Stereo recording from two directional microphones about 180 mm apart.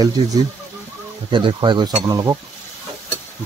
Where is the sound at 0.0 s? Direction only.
20° right (ahead or behind).